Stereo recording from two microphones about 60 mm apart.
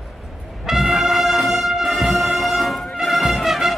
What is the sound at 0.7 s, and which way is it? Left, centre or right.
Brass instrument, centre.